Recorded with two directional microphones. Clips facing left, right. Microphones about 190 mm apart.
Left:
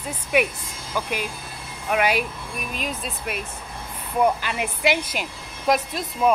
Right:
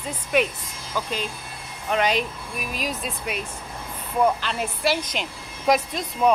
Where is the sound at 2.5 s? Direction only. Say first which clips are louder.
Right 1 dB; centre (ahead or behind).